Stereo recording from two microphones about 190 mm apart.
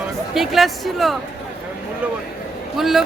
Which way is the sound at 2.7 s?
Centre (ahead or behind).